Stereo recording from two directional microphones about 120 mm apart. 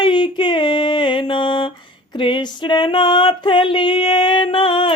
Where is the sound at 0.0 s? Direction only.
40° left (ahead or behind).